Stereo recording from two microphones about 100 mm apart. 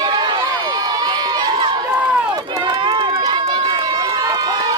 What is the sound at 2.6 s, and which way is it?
Run, 55° right (ahead or behind).